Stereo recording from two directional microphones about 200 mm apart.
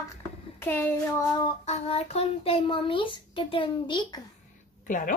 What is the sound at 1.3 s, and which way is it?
Child singing, 25° left (ahead or behind).